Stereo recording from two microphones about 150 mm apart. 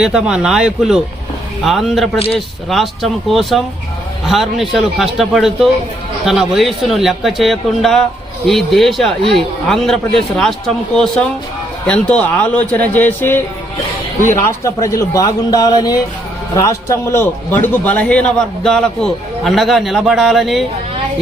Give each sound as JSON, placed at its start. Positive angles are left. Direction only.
{"t": 0.0, "sound": "a man's voice", "side_deg": -5}
{"t": 2.1, "sound": "a man's voice", "side_deg": 40}
{"t": 2.6, "sound": "a man's voice", "side_deg": 0}
{"t": 14.4, "sound": "a man's voice", "side_deg": 20}